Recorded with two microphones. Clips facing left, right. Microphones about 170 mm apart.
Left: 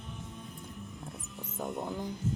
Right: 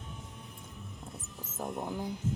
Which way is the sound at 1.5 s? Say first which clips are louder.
Even; centre (ahead or behind).